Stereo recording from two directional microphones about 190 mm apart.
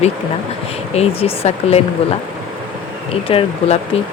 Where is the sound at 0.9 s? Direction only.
30° left (ahead or behind).